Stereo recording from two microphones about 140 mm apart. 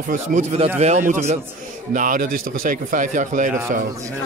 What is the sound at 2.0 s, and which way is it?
Speech, 75° right (ahead or behind).